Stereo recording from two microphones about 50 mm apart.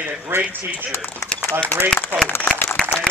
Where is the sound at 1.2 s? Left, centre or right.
Left.